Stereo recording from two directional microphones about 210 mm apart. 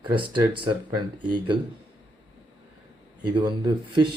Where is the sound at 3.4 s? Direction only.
20° right (ahead or behind).